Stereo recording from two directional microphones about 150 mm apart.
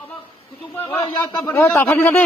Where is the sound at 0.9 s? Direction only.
25° left (ahead or behind).